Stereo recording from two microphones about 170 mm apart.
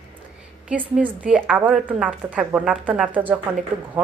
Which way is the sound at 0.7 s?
10° right (ahead or behind).